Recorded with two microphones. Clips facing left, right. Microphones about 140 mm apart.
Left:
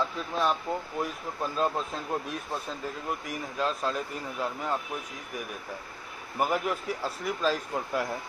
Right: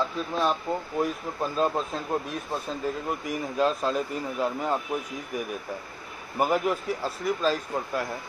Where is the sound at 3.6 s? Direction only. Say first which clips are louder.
Right 5 dB; 5° right (ahead or behind).